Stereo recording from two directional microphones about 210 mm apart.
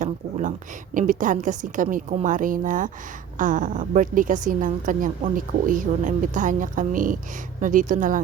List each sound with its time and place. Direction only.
0.0 s a woman's voice: 35° right (ahead or behind)